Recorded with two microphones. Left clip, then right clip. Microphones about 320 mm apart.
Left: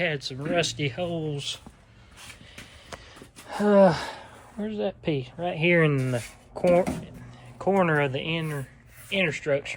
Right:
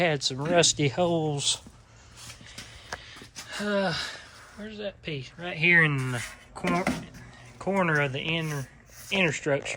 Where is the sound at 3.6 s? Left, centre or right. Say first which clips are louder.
Left 9 dB; centre.